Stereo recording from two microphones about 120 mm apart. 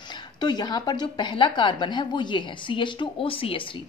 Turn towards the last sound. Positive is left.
turn(degrees=50)  # may be behind; listen again after turning